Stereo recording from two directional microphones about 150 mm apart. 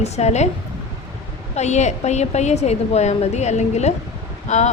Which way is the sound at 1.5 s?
50° left (ahead or behind).